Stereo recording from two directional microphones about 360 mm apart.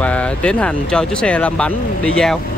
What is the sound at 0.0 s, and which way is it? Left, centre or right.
Speech, centre.